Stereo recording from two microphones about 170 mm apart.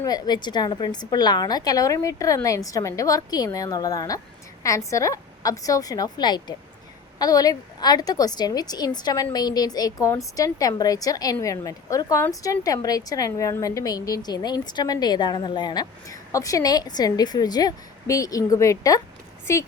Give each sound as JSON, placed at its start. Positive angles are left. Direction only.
{"t": 0.0, "sound": "a woman's voice", "side_deg": 25}